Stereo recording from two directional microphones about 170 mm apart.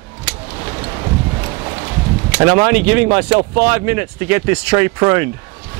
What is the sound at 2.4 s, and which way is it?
Speech, 15° right (ahead or behind).